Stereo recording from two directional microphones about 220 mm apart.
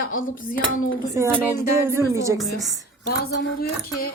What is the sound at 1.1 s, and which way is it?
A woman's voice, 10° right (ahead or behind).